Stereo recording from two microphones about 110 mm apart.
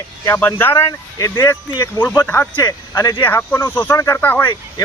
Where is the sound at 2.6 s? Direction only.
35° left (ahead or behind).